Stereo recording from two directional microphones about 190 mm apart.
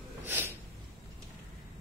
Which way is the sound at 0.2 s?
10° right (ahead or behind).